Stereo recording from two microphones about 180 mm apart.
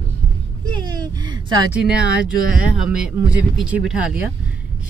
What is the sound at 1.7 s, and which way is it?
Speech, 5° right (ahead or behind).